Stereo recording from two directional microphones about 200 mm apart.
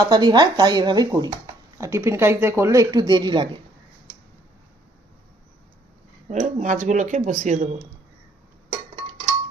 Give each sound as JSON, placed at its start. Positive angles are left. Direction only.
{"t": 0.0, "sound": "speech", "side_deg": -20}
{"t": 6.3, "sound": "speech", "side_deg": -40}